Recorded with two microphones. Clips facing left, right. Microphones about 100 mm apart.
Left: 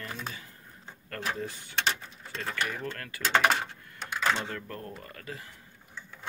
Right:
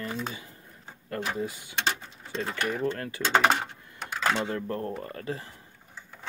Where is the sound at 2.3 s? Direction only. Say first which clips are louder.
Right 4 dB; 30° right (ahead or behind).